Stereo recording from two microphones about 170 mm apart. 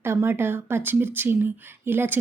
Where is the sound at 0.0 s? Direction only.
15° right (ahead or behind).